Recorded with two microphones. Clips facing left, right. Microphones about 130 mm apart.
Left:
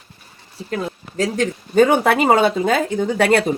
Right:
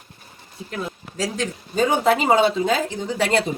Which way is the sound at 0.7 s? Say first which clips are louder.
Left 5 dB; 55° left (ahead or behind).